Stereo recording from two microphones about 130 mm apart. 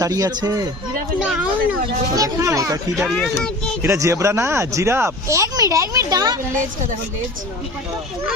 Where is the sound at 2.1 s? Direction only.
25° right (ahead or behind).